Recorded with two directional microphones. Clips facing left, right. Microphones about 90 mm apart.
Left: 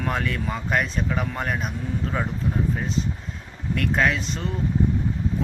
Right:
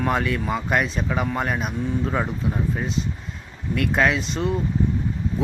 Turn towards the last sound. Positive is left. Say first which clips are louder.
# right 4 dB
turn(degrees=-5)  # may be behind; listen again after turning